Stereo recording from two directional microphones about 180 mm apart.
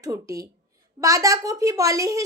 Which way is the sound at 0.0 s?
20° right (ahead or behind).